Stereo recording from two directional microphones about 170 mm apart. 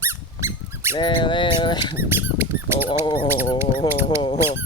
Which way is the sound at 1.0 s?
30° left (ahead or behind).